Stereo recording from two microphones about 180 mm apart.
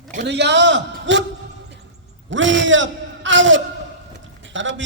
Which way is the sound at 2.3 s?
90° right.